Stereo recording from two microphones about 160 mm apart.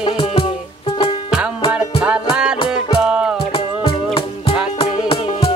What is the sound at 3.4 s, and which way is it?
Music, 35° left (ahead or behind).